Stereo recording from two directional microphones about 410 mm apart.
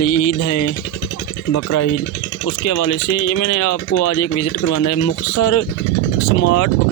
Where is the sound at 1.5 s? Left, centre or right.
Left.